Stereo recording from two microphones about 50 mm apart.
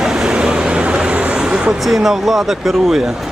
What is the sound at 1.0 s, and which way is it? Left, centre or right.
Vehicle, right.